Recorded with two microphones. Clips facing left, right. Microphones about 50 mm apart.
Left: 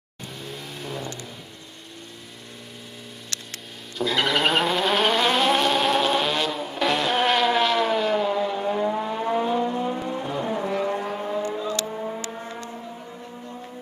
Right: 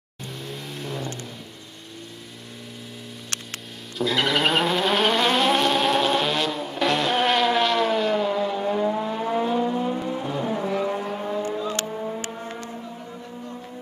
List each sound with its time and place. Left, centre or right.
0.4 s vehicle: centre
3.3 s hum: right
4.0 s vehicle: centre